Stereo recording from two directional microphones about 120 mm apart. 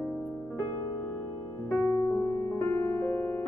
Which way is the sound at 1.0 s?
15° left (ahead or behind).